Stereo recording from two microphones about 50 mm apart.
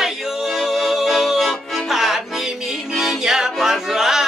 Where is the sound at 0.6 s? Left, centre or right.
Centre.